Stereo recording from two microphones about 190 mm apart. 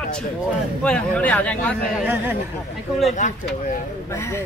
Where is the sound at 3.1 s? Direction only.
40° left (ahead or behind).